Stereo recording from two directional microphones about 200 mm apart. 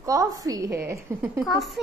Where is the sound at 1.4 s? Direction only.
Centre (ahead or behind).